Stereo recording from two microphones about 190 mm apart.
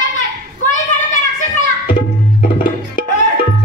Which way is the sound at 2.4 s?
45° left (ahead or behind).